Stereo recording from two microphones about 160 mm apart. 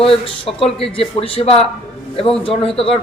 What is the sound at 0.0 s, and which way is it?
A man's voice, 35° left (ahead or behind).